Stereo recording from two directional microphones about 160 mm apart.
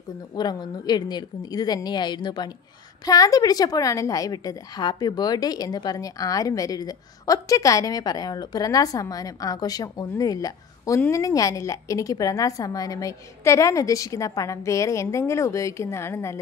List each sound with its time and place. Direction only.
0.4 s a woman's voice: 25° left (ahead or behind)